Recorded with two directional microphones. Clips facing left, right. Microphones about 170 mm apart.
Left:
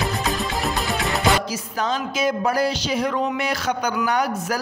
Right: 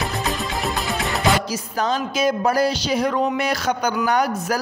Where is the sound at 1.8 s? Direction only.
40° right (ahead or behind).